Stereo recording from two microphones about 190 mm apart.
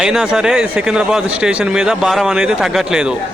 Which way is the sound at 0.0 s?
5° right (ahead or behind).